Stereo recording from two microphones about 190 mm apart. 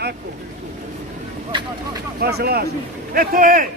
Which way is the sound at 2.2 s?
55° right (ahead or behind).